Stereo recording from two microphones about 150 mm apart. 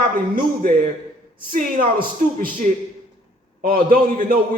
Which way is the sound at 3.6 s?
70° right (ahead or behind).